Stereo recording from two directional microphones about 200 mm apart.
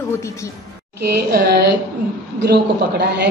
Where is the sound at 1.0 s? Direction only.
55° right (ahead or behind).